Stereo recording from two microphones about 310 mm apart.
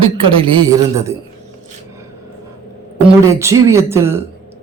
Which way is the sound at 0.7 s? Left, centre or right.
Centre.